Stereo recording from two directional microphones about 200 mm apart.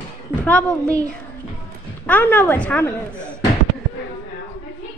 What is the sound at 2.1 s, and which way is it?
A woman's voice, 10° left (ahead or behind).